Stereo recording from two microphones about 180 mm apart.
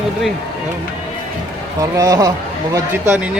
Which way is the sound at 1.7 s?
20° right (ahead or behind).